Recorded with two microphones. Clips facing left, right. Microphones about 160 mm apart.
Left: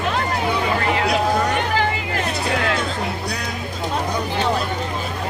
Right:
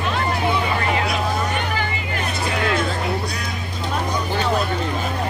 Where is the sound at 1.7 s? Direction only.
90° left.